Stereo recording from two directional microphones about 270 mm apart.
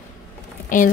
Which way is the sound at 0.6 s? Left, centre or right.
Left.